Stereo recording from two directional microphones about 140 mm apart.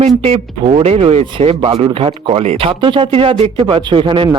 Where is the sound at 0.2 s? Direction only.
40° right (ahead or behind).